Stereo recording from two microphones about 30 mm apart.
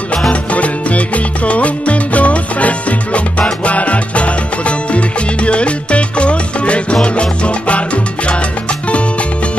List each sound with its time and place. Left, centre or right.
0.3 s music: left
7.0 s salsa music: left